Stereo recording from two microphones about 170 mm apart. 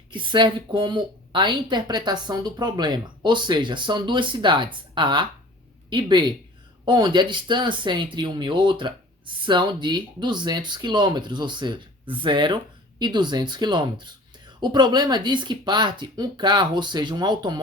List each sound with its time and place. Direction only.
0.1 s a woman's voice: 30° right (ahead or behind)